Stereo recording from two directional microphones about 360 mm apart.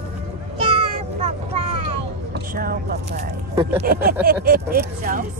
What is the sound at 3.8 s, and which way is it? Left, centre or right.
Speech, right.